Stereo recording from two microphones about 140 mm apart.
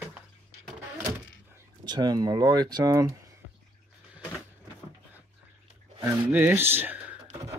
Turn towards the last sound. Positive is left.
turn(degrees=-10)  # may be behind; listen again after turning